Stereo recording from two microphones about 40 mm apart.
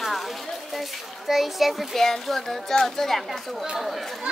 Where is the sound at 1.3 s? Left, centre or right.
Centre.